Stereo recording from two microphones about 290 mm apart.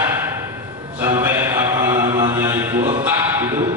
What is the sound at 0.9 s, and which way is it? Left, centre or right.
Mantra, centre.